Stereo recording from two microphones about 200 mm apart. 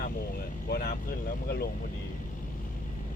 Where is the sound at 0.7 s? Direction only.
45° left (ahead or behind).